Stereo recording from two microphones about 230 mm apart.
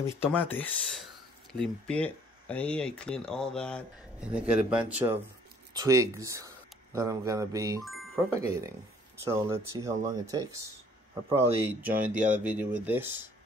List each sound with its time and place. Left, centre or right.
0.0 s speech: centre
11.2 s speech: right
11.6 s speech: centre